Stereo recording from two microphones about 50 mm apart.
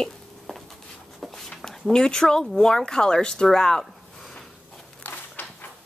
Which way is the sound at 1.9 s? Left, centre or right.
Centre.